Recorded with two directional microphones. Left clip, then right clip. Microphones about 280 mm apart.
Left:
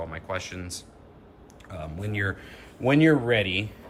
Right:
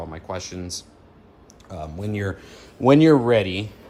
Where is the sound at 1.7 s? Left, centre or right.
Centre.